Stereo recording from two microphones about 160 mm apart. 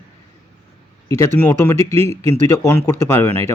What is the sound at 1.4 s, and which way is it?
Speech, 15° left (ahead or behind).